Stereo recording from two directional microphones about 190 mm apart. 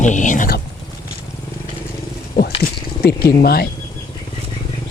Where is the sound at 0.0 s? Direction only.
40° left (ahead or behind).